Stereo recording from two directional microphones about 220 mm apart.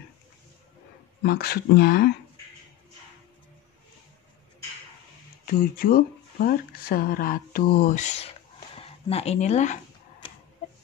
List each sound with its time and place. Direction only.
1.2 s speech: 45° left (ahead or behind)
5.4 s speech: 40° left (ahead or behind)